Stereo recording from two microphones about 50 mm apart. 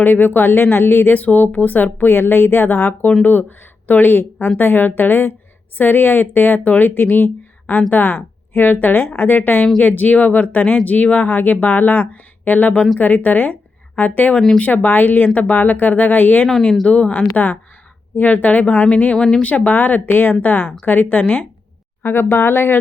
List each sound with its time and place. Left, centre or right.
0.0 s speech: left
1.2 s speech: left
7.7 s speech: left
8.0 s a woman's voice: left
14.8 s speech: left
16.8 s a woman's voice: left
17.3 s speech: left
19.1 s speech: centre
19.4 s speech: left
22.0 s speech: left